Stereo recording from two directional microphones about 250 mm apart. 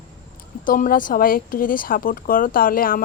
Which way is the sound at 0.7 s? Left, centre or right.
Left.